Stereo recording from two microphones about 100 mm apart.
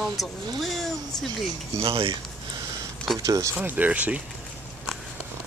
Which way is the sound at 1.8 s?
65° right (ahead or behind).